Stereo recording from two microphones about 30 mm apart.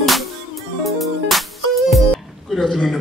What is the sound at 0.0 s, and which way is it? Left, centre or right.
Music, centre.